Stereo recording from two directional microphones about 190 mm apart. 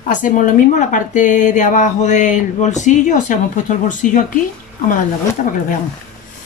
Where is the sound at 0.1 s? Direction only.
40° left (ahead or behind).